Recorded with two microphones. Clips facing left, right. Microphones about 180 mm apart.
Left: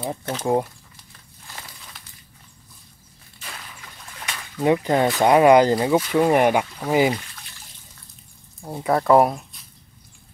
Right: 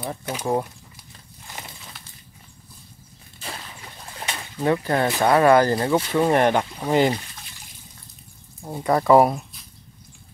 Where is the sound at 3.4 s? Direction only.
30° right (ahead or behind).